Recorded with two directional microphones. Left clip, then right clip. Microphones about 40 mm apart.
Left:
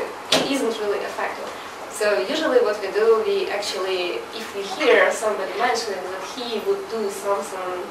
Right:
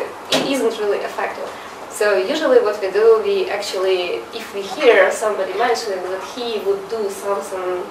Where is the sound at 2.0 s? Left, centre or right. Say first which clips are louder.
Right 5 dB; right.